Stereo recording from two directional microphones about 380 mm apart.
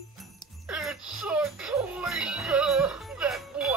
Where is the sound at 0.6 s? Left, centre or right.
Centre.